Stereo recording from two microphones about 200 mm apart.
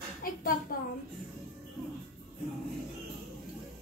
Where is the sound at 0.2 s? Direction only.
45° left (ahead or behind).